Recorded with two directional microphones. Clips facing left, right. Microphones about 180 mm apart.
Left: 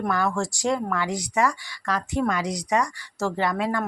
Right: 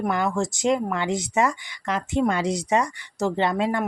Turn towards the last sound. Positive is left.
turn(degrees=-25)  # may be behind; listen again after turning